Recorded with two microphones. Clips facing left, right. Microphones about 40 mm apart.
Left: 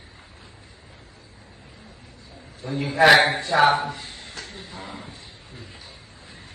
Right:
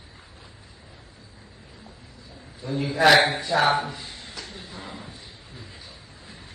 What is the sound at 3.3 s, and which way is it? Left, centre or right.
Speech, left.